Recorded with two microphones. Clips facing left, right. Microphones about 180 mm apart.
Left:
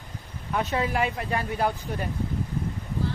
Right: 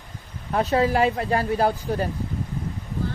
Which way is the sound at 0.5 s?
35° right (ahead or behind).